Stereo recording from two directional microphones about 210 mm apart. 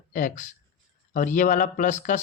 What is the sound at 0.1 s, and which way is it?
Speech, 40° left (ahead or behind).